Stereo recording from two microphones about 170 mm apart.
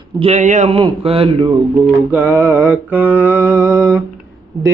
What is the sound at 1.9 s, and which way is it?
Music, 10° right (ahead or behind).